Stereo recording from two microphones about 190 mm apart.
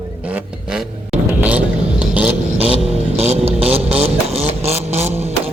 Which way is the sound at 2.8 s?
35° right (ahead or behind).